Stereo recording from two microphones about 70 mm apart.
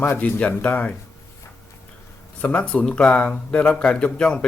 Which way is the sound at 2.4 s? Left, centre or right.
Left.